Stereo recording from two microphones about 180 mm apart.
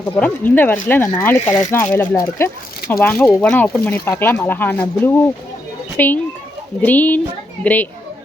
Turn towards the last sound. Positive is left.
turn(degrees=10)  # may be behind; listen again after turning